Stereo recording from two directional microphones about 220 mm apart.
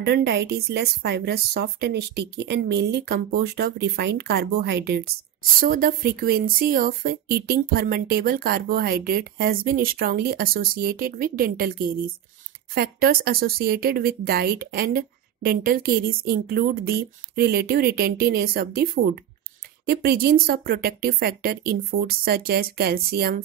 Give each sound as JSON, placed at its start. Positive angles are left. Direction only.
{"t": 0.0, "sound": "speech", "side_deg": -45}